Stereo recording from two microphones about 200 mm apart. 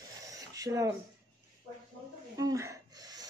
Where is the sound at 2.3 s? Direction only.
15° right (ahead or behind).